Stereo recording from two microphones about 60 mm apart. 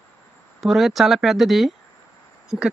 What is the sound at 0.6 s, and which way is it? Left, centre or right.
Speech, centre.